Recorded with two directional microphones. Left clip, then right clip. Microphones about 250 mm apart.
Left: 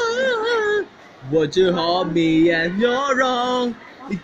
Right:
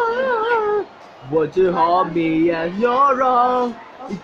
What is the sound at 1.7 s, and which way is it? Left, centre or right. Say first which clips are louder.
Music: right 3 dB; right.